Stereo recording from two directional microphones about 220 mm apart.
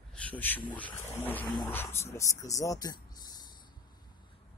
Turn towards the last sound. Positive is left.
turn(degrees=15)  # may be behind; listen again after turning